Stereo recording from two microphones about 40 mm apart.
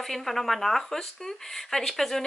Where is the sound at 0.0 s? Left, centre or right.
Centre.